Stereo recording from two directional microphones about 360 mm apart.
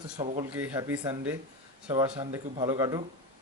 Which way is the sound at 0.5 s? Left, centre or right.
Centre.